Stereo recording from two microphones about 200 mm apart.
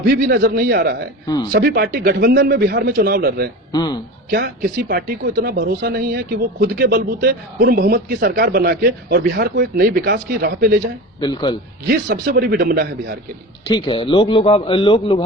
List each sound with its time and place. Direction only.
0.1 s speech: 50° right (ahead or behind)
3.7 s a man's voice: 20° left (ahead or behind)
4.3 s speech: 50° right (ahead or behind)
11.2 s a man's voice: 20° left (ahead or behind)
11.9 s speech: 50° right (ahead or behind)
13.7 s a man's voice: 25° left (ahead or behind)